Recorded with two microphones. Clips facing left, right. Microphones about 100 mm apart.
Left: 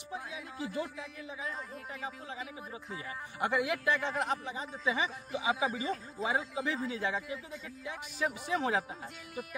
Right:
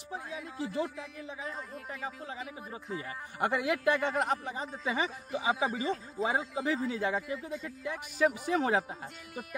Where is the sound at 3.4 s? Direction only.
45° right (ahead or behind).